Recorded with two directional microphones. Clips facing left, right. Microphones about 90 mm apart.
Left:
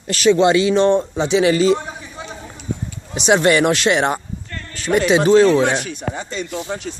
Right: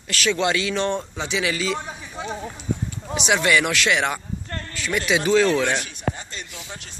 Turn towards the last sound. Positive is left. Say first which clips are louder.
# left 12 dB
turn(degrees=90)